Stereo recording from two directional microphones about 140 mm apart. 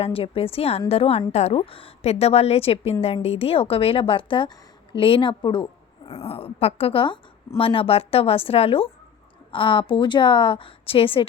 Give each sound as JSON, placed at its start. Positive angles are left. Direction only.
{"t": 0.0, "sound": "a woman's voice", "side_deg": 45}
{"t": 6.2, "sound": "a woman's voice", "side_deg": 45}